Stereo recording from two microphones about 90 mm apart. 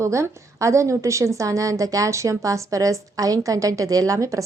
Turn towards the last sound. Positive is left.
turn(degrees=-35)  # may be behind; listen again after turning